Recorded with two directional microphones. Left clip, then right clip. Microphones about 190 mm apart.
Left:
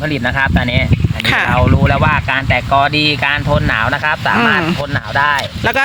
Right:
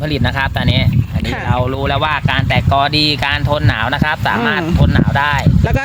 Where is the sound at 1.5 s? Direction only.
55° right (ahead or behind).